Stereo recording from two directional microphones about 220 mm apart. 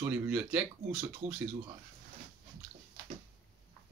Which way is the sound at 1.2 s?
30° right (ahead or behind).